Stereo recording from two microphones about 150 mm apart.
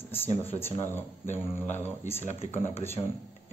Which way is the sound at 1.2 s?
50° left (ahead or behind).